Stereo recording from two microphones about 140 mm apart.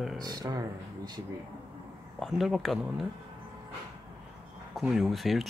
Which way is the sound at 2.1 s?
Centre (ahead or behind).